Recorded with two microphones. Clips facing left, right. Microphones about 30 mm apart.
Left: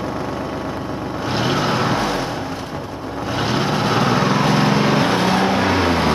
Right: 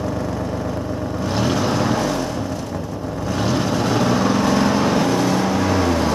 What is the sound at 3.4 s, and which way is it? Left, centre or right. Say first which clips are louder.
Vehicle: left 1 dB; left.